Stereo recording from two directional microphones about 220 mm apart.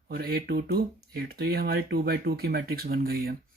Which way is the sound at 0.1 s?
45° right (ahead or behind).